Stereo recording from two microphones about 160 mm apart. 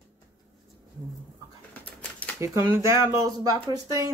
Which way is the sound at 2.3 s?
20° right (ahead or behind).